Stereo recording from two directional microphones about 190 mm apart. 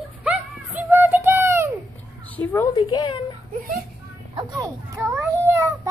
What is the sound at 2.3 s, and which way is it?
Speech, 10° left (ahead or behind).